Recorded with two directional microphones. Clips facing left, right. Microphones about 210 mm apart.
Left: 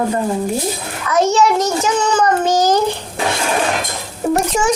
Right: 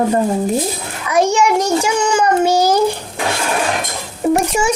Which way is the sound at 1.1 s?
10° right (ahead or behind).